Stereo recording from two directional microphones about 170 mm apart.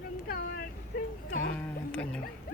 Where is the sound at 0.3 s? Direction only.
55° left (ahead or behind).